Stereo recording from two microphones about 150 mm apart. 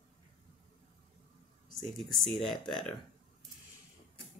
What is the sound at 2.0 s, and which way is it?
Speech, centre (ahead or behind).